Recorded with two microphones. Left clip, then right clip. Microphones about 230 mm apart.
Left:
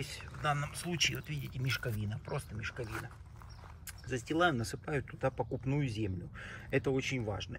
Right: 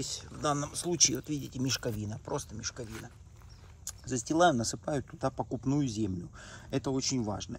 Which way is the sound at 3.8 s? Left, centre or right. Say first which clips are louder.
Right 4 dB; centre.